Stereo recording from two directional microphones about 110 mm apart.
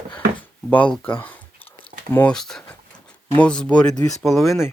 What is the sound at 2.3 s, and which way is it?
Speech, 5° left (ahead or behind).